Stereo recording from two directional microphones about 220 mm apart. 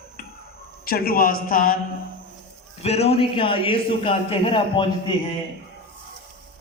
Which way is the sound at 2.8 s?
30° left (ahead or behind).